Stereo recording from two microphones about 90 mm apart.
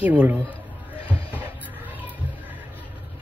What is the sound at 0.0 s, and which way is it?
Speech, 15° right (ahead or behind).